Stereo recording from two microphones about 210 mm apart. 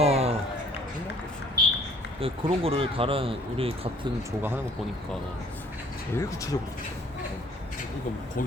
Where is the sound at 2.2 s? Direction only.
25° right (ahead or behind).